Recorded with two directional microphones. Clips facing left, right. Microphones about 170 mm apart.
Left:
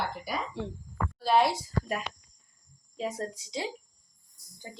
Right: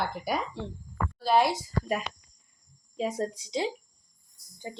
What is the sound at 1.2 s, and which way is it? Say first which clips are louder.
Speech: right 1 dB; centre (ahead or behind).